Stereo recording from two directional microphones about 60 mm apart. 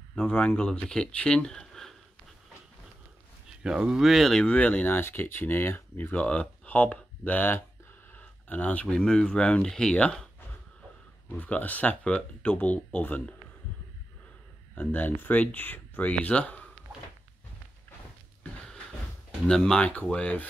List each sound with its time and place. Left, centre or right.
0.1 s speech: centre
0.7 s speech: centre
3.6 s speech: centre
4.4 s speech: left
4.9 s speech: left
6.1 s speech: left
8.2 s a sound: left
9.0 s speech: centre
11.3 s speech: left
14.8 s speech: left
19.4 s speech: centre
19.8 s speech: left